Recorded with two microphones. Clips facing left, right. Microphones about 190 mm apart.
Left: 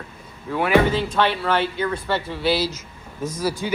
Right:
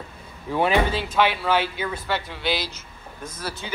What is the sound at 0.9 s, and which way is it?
Speech, 5° right (ahead or behind).